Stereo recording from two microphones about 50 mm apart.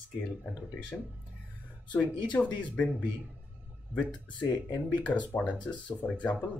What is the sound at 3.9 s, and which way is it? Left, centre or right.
Speech, right.